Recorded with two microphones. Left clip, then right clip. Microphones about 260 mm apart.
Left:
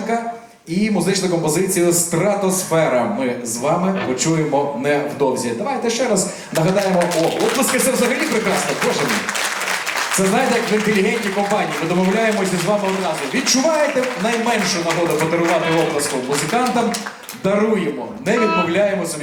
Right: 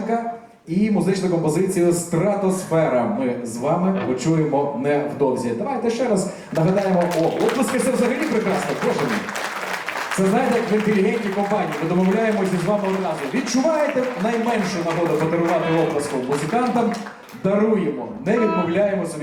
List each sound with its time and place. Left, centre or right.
0.8 s a man's voice: centre
10.2 s a man's voice: centre